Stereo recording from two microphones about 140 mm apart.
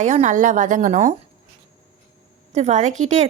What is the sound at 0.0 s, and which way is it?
A woman's voice, 60° right (ahead or behind).